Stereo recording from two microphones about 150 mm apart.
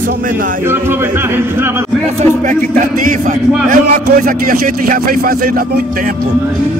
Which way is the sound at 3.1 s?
60° right (ahead or behind).